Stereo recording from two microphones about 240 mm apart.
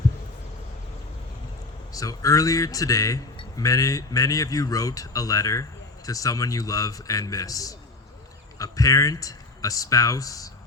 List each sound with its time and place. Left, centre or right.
1.9 s a man's voice: centre